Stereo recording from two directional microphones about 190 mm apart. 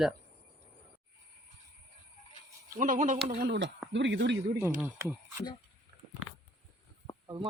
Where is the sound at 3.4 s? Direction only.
60° right (ahead or behind).